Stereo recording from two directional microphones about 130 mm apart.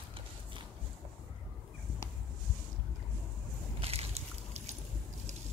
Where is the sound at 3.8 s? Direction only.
50° right (ahead or behind).